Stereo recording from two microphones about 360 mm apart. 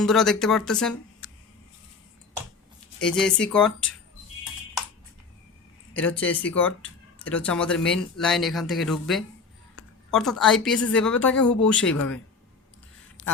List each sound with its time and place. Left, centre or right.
0.0 s a woman's voice: centre
3.0 s a woman's voice: centre
5.9 s a woman's voice: centre
13.2 s a sound: left